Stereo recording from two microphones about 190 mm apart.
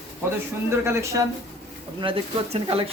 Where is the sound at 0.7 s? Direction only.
15° right (ahead or behind).